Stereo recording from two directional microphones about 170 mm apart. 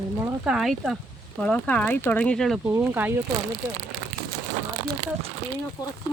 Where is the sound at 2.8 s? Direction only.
10° right (ahead or behind).